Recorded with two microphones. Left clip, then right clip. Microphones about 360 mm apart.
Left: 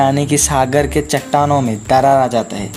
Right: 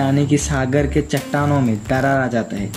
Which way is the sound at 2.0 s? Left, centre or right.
Left.